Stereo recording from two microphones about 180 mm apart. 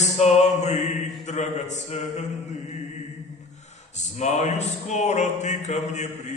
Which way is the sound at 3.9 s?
40° left (ahead or behind).